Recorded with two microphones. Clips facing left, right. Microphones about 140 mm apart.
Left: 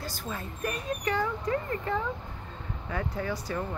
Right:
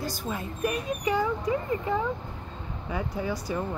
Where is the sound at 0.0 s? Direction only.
15° right (ahead or behind).